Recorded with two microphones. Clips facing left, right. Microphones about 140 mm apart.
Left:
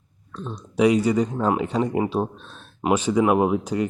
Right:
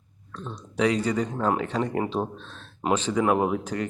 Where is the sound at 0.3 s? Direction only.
10° left (ahead or behind).